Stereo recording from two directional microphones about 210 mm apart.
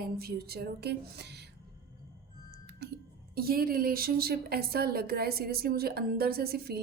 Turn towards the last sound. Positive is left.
turn(degrees=-50)  # may be behind; listen again after turning